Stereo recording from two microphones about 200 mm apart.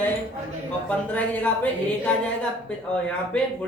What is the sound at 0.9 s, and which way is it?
Speech, 5° left (ahead or behind).